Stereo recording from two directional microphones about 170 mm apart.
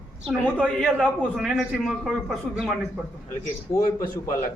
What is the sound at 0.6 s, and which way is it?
A man's voice, 5° right (ahead or behind).